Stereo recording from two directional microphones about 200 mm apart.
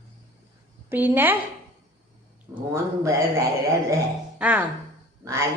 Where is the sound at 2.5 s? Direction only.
15° right (ahead or behind).